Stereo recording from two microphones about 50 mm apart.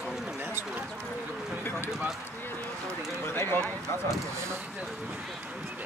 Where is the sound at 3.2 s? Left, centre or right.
Left.